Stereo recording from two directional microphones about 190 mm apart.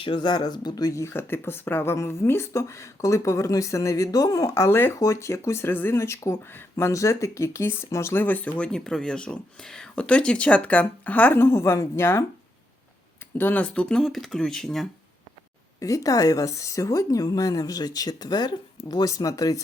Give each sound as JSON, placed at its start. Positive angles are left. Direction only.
{"t": 0.0, "sound": "speech", "side_deg": 25}
{"t": 13.4, "sound": "speech", "side_deg": 10}
{"t": 15.8, "sound": "a woman's voice", "side_deg": 15}